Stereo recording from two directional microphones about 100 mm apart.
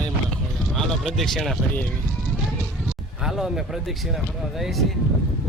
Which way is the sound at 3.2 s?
5° right (ahead or behind).